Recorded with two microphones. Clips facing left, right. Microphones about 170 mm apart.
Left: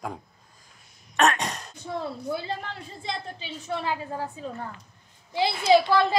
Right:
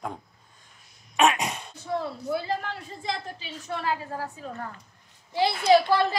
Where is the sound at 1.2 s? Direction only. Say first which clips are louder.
Right 1 dB; 5° right (ahead or behind).